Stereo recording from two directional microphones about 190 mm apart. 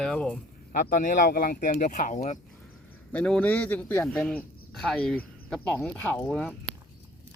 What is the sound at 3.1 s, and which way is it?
Speech, 5° left (ahead or behind).